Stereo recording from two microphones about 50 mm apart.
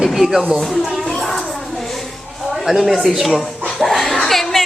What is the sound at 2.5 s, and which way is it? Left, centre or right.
Speech, centre.